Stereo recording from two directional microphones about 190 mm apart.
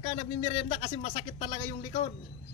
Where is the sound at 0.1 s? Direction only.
30° left (ahead or behind).